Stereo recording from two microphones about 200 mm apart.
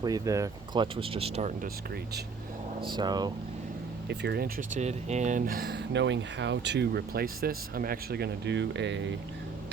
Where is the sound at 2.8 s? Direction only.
20° right (ahead or behind).